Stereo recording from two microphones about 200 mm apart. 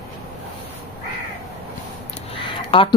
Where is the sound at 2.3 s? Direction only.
25° left (ahead or behind).